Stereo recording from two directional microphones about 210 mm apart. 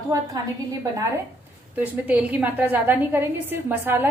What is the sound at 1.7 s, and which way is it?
A woman's voice, 10° right (ahead or behind).